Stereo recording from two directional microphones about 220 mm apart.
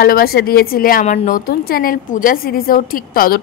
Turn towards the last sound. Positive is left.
turn(degrees=40)  # may be behind; listen again after turning